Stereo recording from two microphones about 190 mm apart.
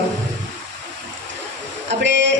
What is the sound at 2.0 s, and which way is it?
Speech, 70° right (ahead or behind).